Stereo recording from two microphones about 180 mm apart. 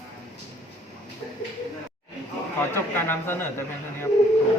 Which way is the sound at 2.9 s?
10° left (ahead or behind).